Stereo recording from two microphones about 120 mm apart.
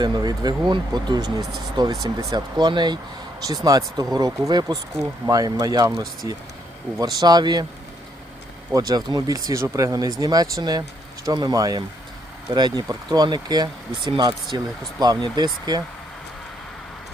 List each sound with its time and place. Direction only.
0.0 s speech: 35° right (ahead or behind)
8.7 s speech: 30° right (ahead or behind)